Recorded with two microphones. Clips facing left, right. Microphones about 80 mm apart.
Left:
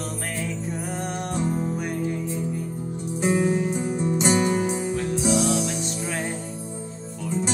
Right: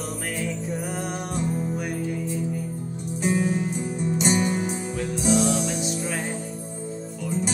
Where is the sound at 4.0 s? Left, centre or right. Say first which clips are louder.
Left 1 dB; left.